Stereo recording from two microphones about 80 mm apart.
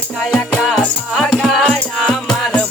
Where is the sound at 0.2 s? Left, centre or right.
Centre.